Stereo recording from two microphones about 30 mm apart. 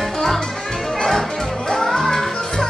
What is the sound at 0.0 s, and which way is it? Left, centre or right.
Music, centre.